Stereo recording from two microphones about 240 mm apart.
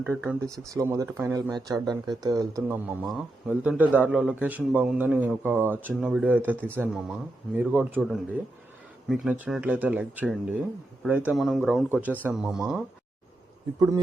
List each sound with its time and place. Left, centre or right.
0.0 s a man's voice: centre
13.7 s speech: centre